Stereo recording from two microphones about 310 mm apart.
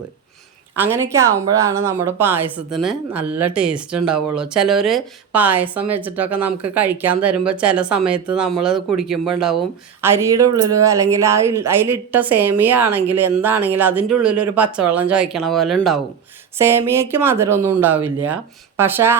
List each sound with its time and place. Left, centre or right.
0.8 s speech: centre